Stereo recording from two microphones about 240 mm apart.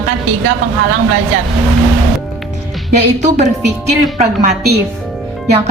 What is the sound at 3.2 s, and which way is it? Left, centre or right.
A woman's voice, right.